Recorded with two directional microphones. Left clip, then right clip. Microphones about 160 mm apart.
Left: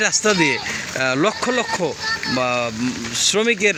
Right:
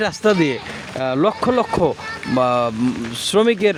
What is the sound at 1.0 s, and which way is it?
Speech, 15° right (ahead or behind).